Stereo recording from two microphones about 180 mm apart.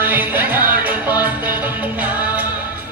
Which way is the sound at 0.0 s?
10° right (ahead or behind).